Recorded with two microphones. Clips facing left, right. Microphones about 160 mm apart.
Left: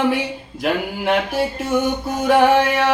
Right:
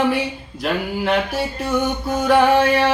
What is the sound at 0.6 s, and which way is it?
Mantra, 15° left (ahead or behind).